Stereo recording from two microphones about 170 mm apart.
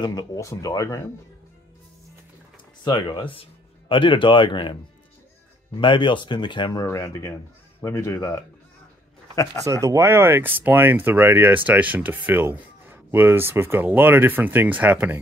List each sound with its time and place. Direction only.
0.0 s speech: 25° left (ahead or behind)
2.8 s speech: 25° left (ahead or behind)
5.8 s speech: 30° left (ahead or behind)
9.7 s speech: 20° right (ahead or behind)